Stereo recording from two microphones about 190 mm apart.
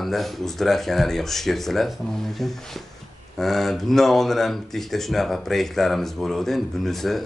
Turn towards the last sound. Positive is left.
turn(degrees=0)  # may be behind; listen again after turning